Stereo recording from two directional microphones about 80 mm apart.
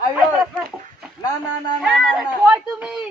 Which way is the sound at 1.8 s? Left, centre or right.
Centre.